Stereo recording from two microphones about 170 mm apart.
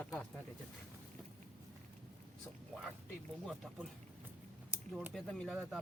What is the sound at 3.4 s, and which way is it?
Speech, centre (ahead or behind).